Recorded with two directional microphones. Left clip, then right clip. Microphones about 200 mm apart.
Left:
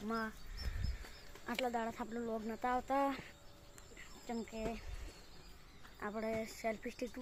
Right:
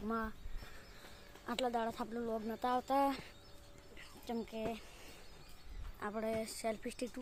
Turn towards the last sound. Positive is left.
turn(degrees=-10)  # may be behind; listen again after turning